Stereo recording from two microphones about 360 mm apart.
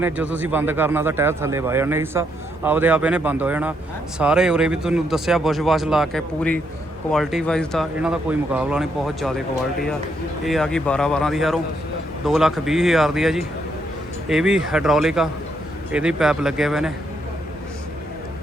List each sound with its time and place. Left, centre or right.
0.0 s a man's voice: centre
10.4 s speech: centre